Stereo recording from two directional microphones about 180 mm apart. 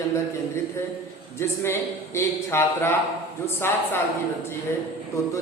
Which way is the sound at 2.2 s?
15° left (ahead or behind).